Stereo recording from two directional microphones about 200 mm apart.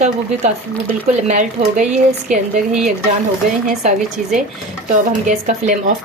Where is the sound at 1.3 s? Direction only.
35° right (ahead or behind).